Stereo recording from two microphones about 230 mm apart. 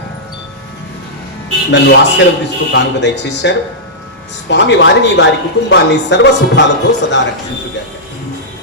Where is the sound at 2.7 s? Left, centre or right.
Left.